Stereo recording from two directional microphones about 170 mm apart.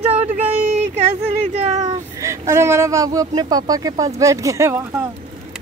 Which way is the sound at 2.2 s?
15° right (ahead or behind).